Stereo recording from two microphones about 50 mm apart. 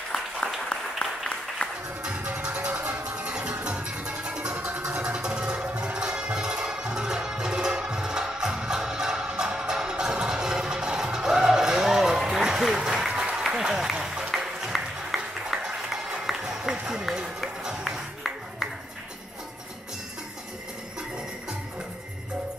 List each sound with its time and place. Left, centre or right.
0.7 s applause: centre
1.6 s music: left
2.0 s music: right
16.8 s run: centre
17.6 s music: centre